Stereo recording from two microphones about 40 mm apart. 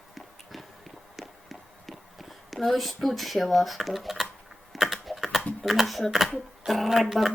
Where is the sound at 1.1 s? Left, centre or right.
Centre.